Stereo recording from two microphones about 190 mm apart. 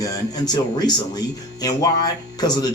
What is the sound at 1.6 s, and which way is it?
Speech, 20° left (ahead or behind).